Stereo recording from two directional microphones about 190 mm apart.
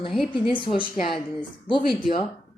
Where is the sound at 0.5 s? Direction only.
25° left (ahead or behind).